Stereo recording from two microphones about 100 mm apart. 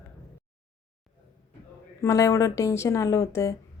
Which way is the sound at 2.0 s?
30° left (ahead or behind).